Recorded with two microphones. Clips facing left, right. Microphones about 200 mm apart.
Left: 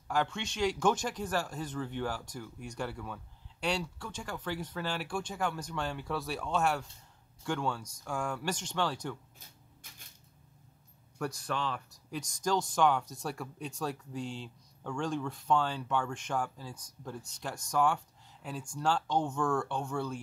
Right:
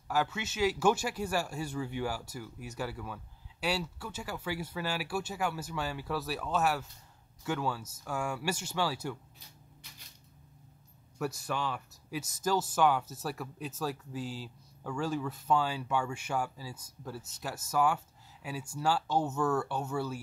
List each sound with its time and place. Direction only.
0.1 s speech: 5° right (ahead or behind)
9.8 s a sound: 50° left (ahead or behind)
11.1 s speech: 5° right (ahead or behind)